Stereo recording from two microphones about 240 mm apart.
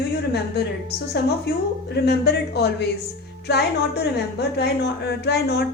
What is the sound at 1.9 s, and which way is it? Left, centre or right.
A woman's voice, left.